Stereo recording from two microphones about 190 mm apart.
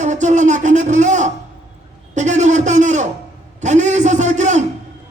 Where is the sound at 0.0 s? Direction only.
40° right (ahead or behind).